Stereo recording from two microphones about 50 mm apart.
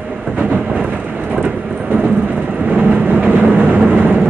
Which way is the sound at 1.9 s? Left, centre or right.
Right.